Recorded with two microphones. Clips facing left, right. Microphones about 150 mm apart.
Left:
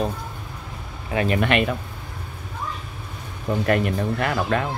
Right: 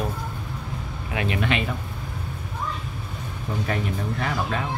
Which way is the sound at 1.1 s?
35° left (ahead or behind).